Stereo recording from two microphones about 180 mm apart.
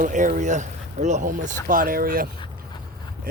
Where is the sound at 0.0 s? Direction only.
45° right (ahead or behind).